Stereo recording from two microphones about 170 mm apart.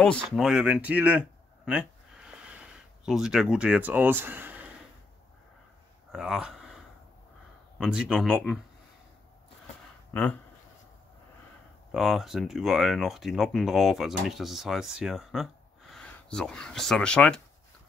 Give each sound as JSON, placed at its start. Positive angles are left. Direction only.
{"t": 0.4, "sound": "speech", "side_deg": -5}
{"t": 1.7, "sound": "a sound", "side_deg": -5}
{"t": 6.1, "sound": "speech", "side_deg": -5}
{"t": 7.8, "sound": "speech", "side_deg": -5}
{"t": 10.1, "sound": "speech", "side_deg": 10}
{"t": 11.9, "sound": "speech", "side_deg": 0}